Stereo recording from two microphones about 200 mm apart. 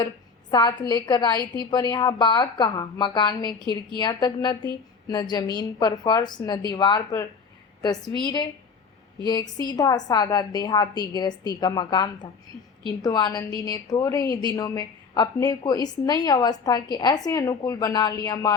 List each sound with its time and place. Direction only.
0.5 s a woman's voice: 20° left (ahead or behind)